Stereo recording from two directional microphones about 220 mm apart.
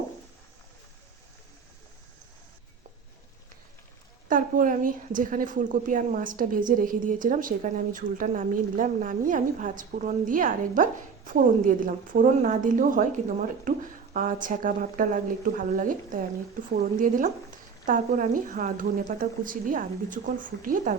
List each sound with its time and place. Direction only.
4.3 s a woman's voice: 40° right (ahead or behind)